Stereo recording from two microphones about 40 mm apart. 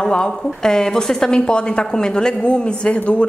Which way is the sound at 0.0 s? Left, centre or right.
Centre.